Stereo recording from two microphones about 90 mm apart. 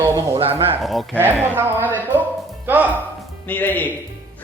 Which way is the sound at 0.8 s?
Centre (ahead or behind).